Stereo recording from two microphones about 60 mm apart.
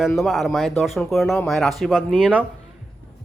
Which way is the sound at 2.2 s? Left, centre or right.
Right.